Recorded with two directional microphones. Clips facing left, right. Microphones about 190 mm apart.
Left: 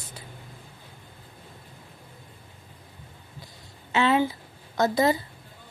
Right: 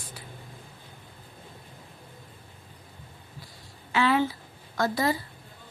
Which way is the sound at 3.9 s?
25° left (ahead or behind).